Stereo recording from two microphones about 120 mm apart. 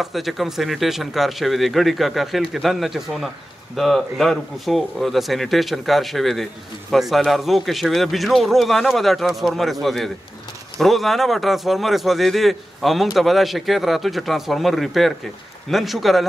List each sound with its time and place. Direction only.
0.0 s speech: centre (ahead or behind)